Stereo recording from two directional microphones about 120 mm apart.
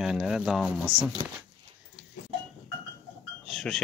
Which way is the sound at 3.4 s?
5° left (ahead or behind).